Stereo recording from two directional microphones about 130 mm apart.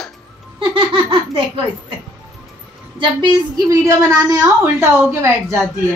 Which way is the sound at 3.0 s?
40° right (ahead or behind).